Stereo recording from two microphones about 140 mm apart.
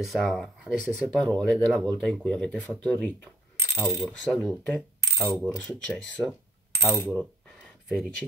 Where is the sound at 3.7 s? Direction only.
15° left (ahead or behind).